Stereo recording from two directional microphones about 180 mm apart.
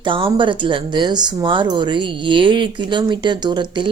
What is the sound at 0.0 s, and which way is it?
Speech, 25° right (ahead or behind).